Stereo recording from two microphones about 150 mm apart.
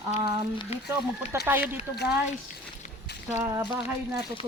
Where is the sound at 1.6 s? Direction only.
90° left.